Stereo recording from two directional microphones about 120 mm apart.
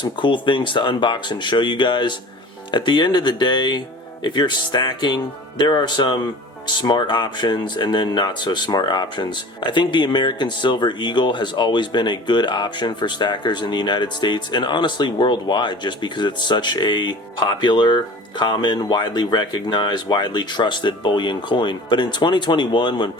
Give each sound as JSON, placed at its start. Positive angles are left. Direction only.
{"t": 0.0, "sound": "speech", "side_deg": 40}